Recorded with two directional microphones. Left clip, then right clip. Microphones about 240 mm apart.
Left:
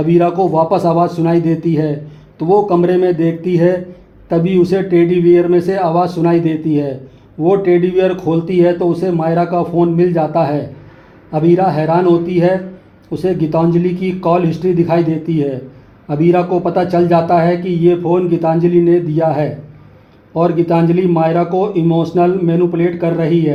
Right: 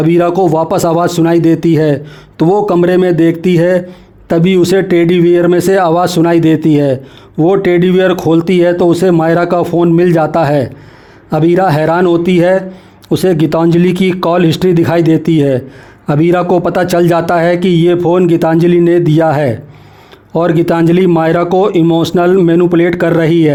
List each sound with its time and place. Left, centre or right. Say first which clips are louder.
0.0 s a man's voice: right 3 dB; right